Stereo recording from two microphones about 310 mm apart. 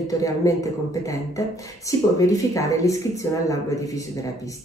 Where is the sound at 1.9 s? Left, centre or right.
Centre.